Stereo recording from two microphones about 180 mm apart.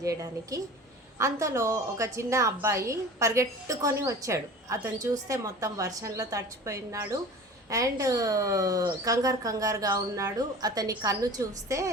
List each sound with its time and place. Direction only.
0.0 s a woman's voice: 15° right (ahead or behind)